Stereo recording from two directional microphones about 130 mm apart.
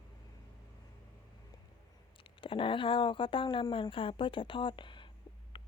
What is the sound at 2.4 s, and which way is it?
A woman's voice, 40° left (ahead or behind).